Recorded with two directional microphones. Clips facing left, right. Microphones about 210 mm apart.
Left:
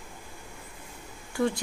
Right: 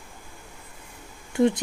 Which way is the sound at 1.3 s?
20° right (ahead or behind).